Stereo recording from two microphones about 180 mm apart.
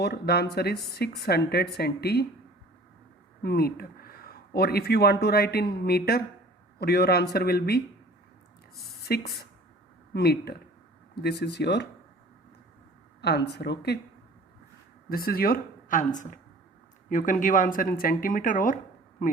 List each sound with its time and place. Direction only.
0.0 s speech: 65° left (ahead or behind)
3.4 s speech: 60° left (ahead or behind)
9.0 s speech: 60° left (ahead or behind)
13.2 s speech: 65° left (ahead or behind)
15.1 s speech: 55° left (ahead or behind)